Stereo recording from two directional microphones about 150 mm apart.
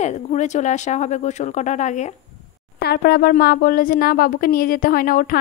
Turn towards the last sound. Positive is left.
turn(degrees=70)  # may be behind; listen again after turning